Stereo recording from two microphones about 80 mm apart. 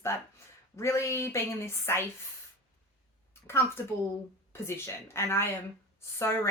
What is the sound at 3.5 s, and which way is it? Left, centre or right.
Speech, left.